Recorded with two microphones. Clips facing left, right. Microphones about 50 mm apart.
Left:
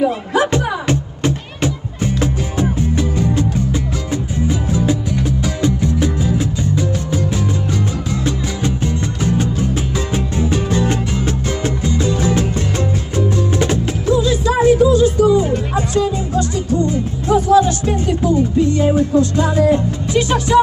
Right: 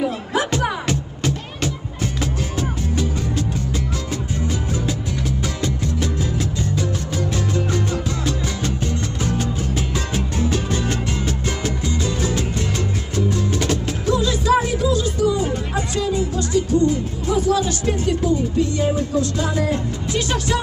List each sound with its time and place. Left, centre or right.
0.9 s music: left